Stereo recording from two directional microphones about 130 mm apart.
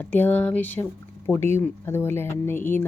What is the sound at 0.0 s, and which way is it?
A woman's voice, 15° left (ahead or behind).